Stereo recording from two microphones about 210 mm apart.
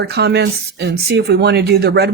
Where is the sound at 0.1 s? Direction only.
50° right (ahead or behind).